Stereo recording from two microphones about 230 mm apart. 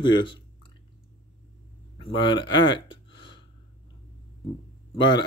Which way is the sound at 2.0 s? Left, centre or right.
Centre.